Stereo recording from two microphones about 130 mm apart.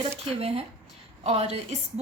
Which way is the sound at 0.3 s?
50° right (ahead or behind).